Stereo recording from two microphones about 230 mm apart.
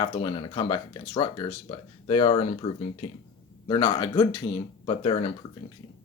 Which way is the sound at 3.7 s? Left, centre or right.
Left.